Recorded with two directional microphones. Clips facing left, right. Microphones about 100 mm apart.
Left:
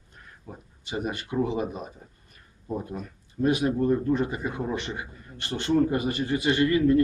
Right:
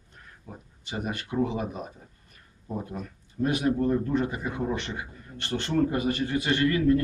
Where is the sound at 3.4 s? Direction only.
15° left (ahead or behind).